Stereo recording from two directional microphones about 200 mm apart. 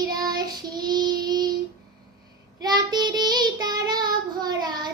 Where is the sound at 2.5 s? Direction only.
20° right (ahead or behind).